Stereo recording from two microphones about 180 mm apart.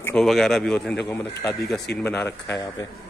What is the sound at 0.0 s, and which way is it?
Speech, 5° left (ahead or behind).